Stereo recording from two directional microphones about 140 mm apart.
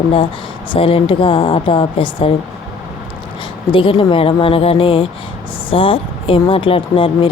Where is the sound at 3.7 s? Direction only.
40° left (ahead or behind).